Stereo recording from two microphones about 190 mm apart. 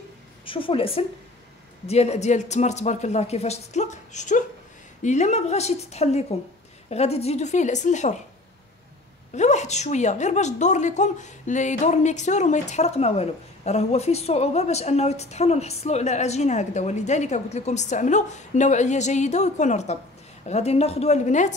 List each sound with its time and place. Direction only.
0.5 s a woman's voice: 30° left (ahead or behind)
9.3 s a woman's voice: 35° left (ahead or behind)